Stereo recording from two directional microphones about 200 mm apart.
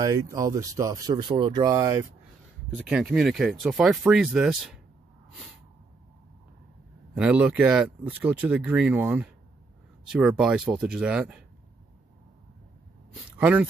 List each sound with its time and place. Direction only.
0.0 s speech: 15° right (ahead or behind)
2.7 s speech: centre (ahead or behind)
7.2 s speech: 5° right (ahead or behind)
13.4 s speech: 10° right (ahead or behind)